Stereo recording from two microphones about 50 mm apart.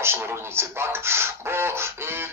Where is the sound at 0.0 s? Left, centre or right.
Right.